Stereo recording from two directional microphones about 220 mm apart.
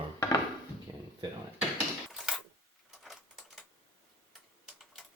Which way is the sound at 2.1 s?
Centre (ahead or behind).